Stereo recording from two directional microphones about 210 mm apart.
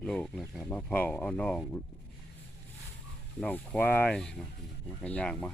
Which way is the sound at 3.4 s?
5° left (ahead or behind).